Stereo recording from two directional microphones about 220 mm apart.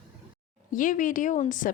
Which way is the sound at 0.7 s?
35° left (ahead or behind).